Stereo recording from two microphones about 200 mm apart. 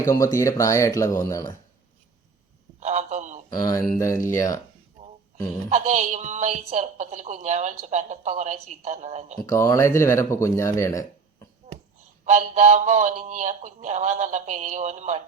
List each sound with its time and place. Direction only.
0.1 s speech: 15° left (ahead or behind)
2.8 s telephone: 35° right (ahead or behind)
3.7 s speech: 15° left (ahead or behind)
5.6 s a woman's voice: 35° right (ahead or behind)
9.5 s speech: 15° left (ahead or behind)
12.2 s a woman's voice: 35° right (ahead or behind)